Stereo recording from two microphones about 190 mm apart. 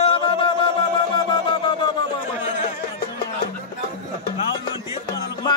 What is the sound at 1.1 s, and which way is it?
Wind instrument, 25° left (ahead or behind).